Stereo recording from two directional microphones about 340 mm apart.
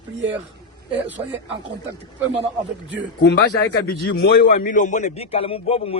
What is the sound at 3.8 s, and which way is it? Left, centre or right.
A man's voice, left.